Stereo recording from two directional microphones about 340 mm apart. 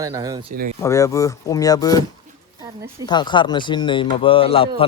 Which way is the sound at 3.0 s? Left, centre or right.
Centre.